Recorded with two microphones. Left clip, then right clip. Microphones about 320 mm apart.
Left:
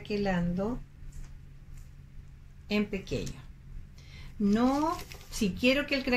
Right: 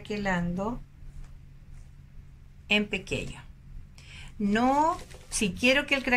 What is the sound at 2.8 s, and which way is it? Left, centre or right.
Speech, right.